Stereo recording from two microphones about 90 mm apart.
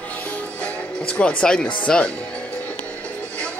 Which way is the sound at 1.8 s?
10° left (ahead or behind).